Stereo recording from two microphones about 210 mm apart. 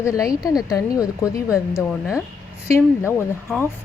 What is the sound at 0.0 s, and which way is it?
Speech, 15° left (ahead or behind).